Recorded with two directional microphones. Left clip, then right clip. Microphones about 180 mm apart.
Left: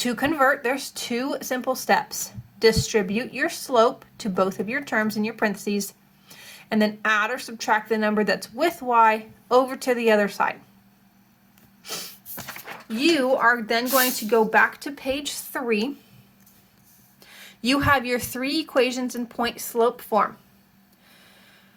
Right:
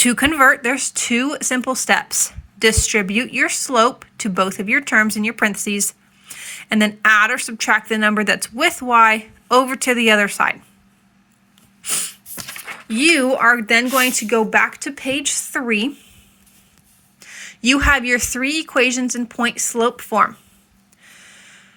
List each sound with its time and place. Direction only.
0.0 s speech: 45° right (ahead or behind)
11.8 s sneeze: 45° right (ahead or behind)
12.9 s a woman's voice: 45° right (ahead or behind)
17.2 s a woman's voice: 30° right (ahead or behind)